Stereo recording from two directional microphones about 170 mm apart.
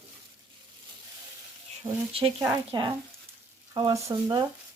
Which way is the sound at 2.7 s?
30° right (ahead or behind).